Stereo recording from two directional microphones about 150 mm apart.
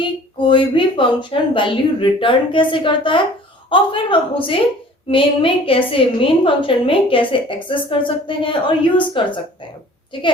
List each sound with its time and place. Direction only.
0.0 s a woman's voice: 35° left (ahead or behind)